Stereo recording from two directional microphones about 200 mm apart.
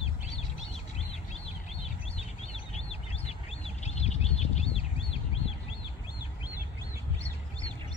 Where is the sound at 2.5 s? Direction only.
30° left (ahead or behind).